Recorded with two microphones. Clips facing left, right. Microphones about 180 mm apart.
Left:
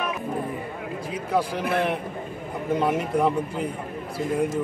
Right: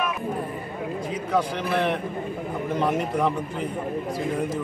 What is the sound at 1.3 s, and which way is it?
A man's voice, 5° left (ahead or behind).